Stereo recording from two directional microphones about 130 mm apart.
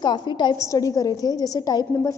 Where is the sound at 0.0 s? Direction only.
35° left (ahead or behind).